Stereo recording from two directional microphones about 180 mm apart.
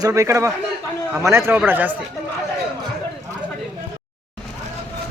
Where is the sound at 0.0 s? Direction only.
15° right (ahead or behind).